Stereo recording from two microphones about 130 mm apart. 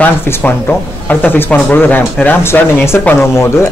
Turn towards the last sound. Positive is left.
turn(degrees=20)  # may be behind; listen again after turning